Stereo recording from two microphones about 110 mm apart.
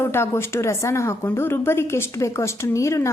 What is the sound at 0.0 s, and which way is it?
A woman's voice, 20° left (ahead or behind).